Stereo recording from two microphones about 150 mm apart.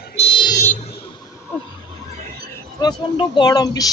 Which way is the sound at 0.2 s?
85° left.